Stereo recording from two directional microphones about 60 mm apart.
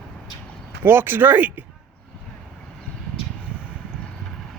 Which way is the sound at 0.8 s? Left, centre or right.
Right.